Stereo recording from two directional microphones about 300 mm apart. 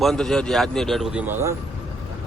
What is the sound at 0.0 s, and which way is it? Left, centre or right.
A man's voice, centre.